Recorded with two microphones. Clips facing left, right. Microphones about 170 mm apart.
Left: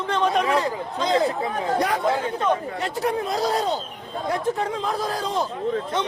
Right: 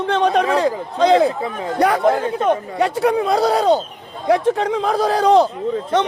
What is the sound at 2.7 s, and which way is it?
A man's voice, 80° right.